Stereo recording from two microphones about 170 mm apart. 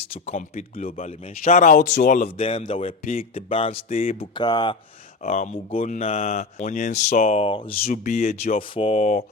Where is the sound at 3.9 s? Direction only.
55° left (ahead or behind).